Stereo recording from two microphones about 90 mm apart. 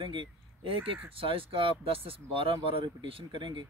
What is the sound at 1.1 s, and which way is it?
Speech, 90° right.